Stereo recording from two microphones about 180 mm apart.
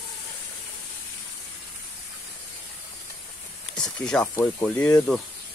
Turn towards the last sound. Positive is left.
turn(degrees=5)  # may be behind; listen again after turning